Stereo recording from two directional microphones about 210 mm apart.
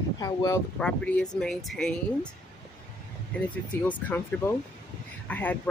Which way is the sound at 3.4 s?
5° left (ahead or behind).